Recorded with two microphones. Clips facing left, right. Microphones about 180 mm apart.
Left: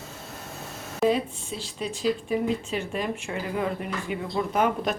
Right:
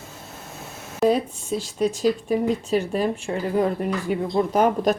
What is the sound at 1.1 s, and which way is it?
Speech, 45° right (ahead or behind).